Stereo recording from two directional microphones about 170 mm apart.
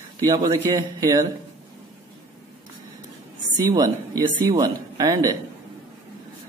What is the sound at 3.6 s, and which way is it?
Speech, 20° right (ahead or behind).